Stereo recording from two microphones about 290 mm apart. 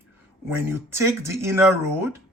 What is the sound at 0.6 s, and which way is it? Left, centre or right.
Speech, centre.